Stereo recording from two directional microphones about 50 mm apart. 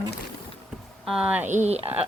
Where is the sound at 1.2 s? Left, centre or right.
Right.